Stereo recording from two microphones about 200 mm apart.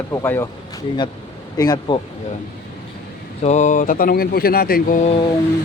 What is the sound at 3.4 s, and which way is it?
Speech, 35° left (ahead or behind).